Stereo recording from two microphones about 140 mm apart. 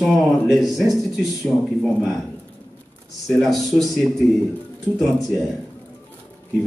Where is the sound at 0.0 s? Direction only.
Centre (ahead or behind).